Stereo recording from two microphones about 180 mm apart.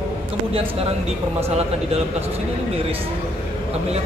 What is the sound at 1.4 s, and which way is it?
Speech, 35° right (ahead or behind).